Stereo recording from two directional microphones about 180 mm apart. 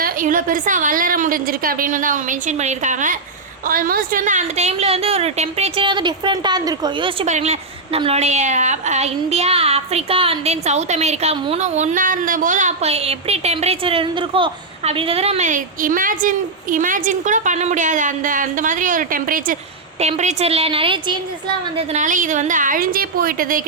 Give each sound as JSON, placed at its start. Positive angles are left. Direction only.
{"t": 0.0, "sound": "a woman's voice", "side_deg": -50}
{"t": 7.3, "sound": "a woman's voice", "side_deg": -40}
{"t": 20.0, "sound": "a woman's voice", "side_deg": -40}
{"t": 21.8, "sound": "a woman's voice", "side_deg": -45}